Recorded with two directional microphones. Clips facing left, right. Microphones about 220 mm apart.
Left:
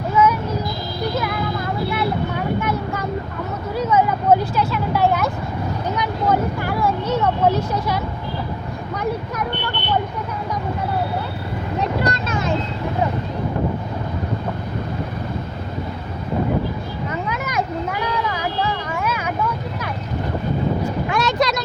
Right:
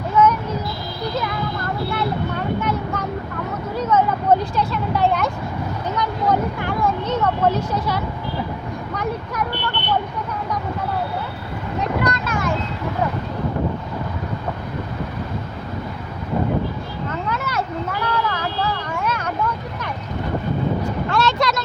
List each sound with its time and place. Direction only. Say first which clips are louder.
0.2 s a sound: right 1 dB; 10° left (ahead or behind)
2.6 s vehicle: even; 10° left (ahead or behind)
12.0 s vehicle: even; 25° left (ahead or behind)
17.1 s vehicle: right 1 dB; 15° left (ahead or behind)
21.1 s vehicle: even; 15° left (ahead or behind)